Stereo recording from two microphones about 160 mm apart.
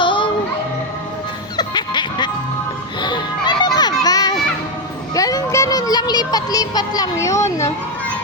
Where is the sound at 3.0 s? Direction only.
30° left (ahead or behind).